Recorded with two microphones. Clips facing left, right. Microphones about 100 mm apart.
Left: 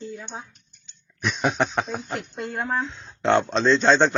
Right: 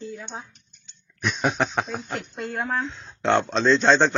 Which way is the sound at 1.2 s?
Centre (ahead or behind).